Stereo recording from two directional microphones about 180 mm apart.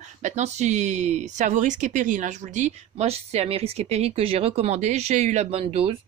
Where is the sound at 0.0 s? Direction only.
40° right (ahead or behind).